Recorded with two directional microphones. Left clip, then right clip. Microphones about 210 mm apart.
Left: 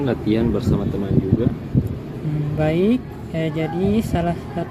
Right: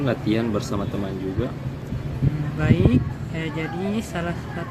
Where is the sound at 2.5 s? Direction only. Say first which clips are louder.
Left 3 dB; 25° left (ahead or behind).